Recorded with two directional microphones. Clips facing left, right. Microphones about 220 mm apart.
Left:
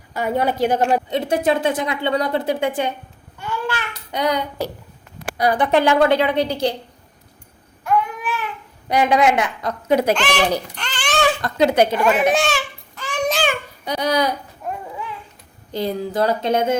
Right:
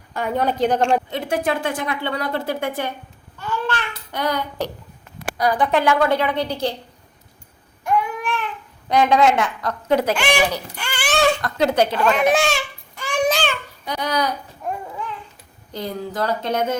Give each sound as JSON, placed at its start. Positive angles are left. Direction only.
{"t": 0.1, "sound": "a woman's voice", "side_deg": 5}
{"t": 1.1, "sound": "speech", "side_deg": 20}
{"t": 3.3, "sound": "babbling", "side_deg": 10}
{"t": 5.4, "sound": "speech", "side_deg": 25}
{"t": 8.2, "sound": "baby cry", "side_deg": 5}
{"t": 8.9, "sound": "a woman's voice", "side_deg": 10}
{"t": 10.2, "sound": "speech", "side_deg": -10}
{"t": 10.8, "sound": "babbling", "side_deg": -10}
{"t": 11.4, "sound": "a woman's voice", "side_deg": 20}
{"t": 13.0, "sound": "babbling", "side_deg": -10}
{"t": 13.3, "sound": "babbling", "side_deg": 10}
{"t": 15.8, "sound": "speech", "side_deg": 30}